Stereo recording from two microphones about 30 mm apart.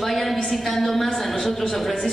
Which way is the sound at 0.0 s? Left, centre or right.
Centre.